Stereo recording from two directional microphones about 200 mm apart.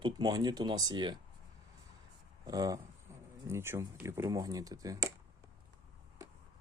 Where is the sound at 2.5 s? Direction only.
20° right (ahead or behind).